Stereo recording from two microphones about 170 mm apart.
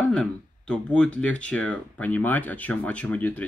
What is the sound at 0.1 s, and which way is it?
Speech, 5° left (ahead or behind).